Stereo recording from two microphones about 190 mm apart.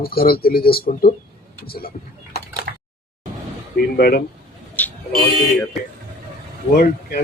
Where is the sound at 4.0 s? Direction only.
55° left (ahead or behind).